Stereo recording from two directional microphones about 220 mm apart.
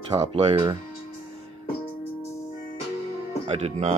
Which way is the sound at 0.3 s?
25° right (ahead or behind).